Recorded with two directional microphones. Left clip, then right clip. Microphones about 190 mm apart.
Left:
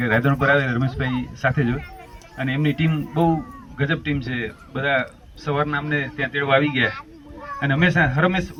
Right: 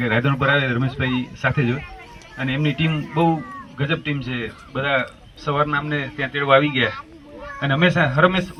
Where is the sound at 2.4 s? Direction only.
50° left (ahead or behind).